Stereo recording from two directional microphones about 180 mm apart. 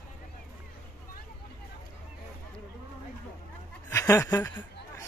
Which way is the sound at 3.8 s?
15° left (ahead or behind).